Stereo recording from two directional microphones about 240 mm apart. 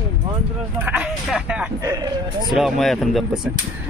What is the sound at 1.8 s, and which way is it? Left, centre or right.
Speech, centre.